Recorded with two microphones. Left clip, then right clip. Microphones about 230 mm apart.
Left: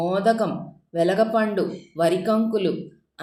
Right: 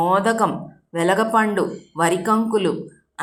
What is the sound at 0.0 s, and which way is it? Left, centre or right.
Speech, centre.